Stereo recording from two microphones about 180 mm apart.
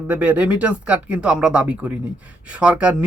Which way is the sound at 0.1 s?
10° right (ahead or behind).